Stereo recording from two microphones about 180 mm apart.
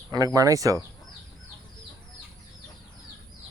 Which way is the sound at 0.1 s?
20° right (ahead or behind).